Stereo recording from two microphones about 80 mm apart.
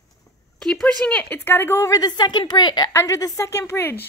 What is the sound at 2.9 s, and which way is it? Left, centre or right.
A woman's voice, left.